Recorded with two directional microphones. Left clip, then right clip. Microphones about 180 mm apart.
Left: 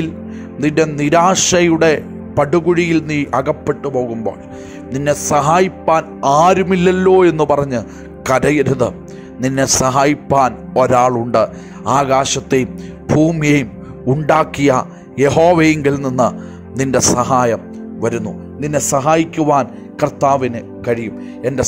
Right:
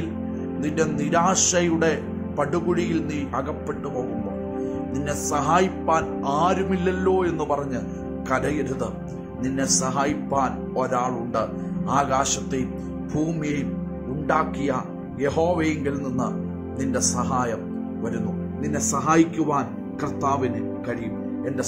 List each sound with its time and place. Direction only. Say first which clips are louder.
0.6 s speech: left 10 dB; 40° left (ahead or behind)
13.4 s speech: left 13 dB; 50° left (ahead or behind)